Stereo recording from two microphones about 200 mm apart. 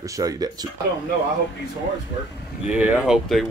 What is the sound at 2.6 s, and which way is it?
Speech, 5° right (ahead or behind).